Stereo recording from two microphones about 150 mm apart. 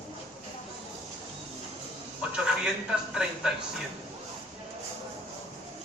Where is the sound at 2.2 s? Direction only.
10° right (ahead or behind).